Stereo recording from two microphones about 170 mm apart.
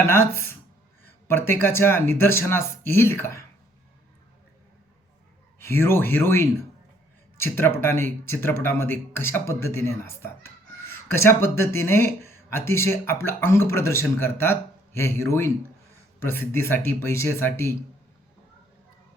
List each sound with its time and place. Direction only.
0.0 s speech: 15° left (ahead or behind)
5.5 s speech: 15° left (ahead or behind)